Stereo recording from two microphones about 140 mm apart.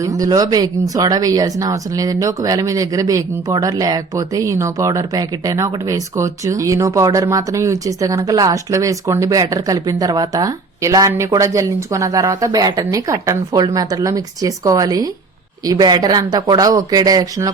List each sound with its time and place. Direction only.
0.0 s speech: 25° right (ahead or behind)